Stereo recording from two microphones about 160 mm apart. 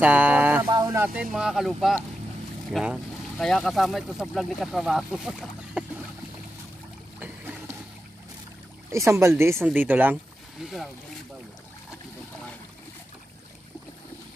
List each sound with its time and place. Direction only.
0.0 s a sound: 10° right (ahead or behind)
0.9 s speech: 15° right (ahead or behind)
1.2 s speech: 5° right (ahead or behind)
7.2 s boat: 10° right (ahead or behind)
8.9 s speech: 20° right (ahead or behind)
10.6 s speech: centre (ahead or behind)